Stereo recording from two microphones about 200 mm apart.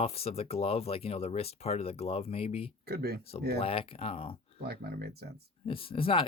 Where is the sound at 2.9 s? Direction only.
50° right (ahead or behind).